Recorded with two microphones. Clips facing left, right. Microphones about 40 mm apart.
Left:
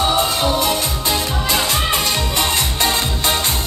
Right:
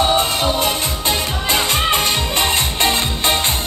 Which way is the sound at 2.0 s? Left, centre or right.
Right.